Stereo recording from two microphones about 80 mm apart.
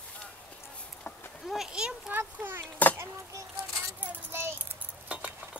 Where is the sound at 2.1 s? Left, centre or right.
Right.